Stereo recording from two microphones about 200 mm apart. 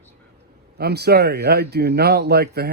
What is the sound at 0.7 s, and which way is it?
Speech, 55° right (ahead or behind).